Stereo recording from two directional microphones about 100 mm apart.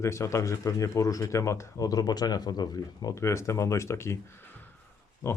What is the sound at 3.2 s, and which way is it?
Speech, 30° left (ahead or behind).